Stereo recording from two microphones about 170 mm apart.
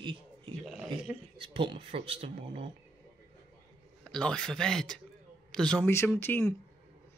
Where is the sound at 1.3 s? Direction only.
30° right (ahead or behind).